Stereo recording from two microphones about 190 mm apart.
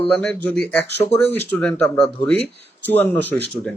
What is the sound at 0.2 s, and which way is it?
Speech, 5° left (ahead or behind).